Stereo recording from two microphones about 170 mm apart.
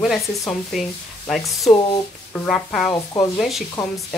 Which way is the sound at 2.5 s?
5° left (ahead or behind).